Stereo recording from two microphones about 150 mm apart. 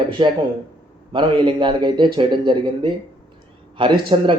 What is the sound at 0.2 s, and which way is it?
Speech, 35° right (ahead or behind).